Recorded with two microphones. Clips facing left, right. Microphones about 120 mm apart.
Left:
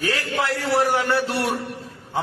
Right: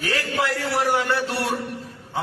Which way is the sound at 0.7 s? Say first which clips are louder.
Left 4 dB; 25° left (ahead or behind).